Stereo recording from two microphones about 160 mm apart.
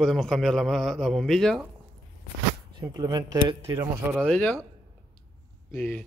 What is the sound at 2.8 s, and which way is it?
Speech, 25° right (ahead or behind).